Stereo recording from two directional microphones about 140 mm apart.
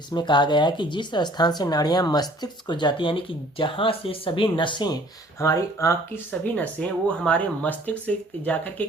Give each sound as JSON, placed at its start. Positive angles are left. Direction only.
{"t": 0.1, "sound": "speech", "side_deg": 30}
{"t": 5.4, "sound": "speech", "side_deg": 20}